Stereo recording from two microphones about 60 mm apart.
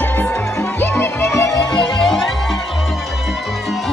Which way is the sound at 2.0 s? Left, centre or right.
Centre.